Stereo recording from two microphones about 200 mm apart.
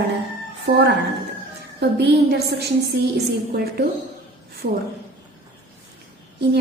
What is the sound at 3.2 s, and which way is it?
Speech, 50° right (ahead or behind).